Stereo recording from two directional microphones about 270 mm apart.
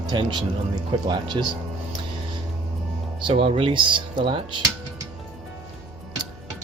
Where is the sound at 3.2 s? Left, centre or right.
Centre.